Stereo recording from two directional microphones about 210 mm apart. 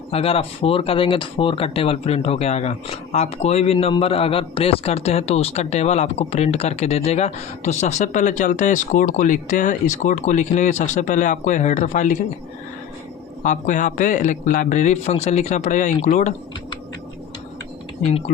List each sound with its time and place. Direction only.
0.1 s speech: 25° left (ahead or behind)
13.4 s speech: 35° left (ahead or behind)